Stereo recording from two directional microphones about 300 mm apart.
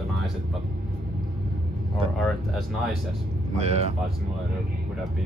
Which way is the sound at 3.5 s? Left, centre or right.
Right.